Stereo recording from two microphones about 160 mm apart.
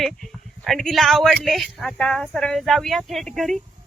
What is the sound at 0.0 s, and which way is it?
Speech, centre (ahead or behind).